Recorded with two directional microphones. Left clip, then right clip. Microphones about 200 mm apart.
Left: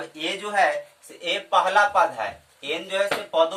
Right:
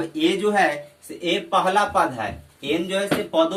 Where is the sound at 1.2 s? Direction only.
Centre (ahead or behind).